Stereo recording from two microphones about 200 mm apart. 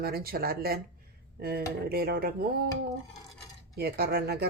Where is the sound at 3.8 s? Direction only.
50° right (ahead or behind).